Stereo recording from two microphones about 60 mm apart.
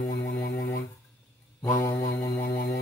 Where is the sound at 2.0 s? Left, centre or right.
Left.